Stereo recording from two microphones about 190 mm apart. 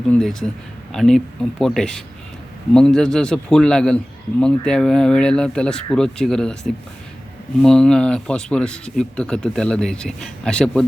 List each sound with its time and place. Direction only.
0.1 s a man's voice: 5° left (ahead or behind)